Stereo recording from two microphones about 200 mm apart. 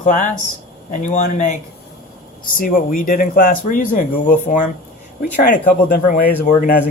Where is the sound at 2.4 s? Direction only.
45° left (ahead or behind).